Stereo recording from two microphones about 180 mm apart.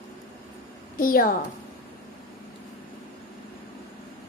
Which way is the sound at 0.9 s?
50° left (ahead or behind).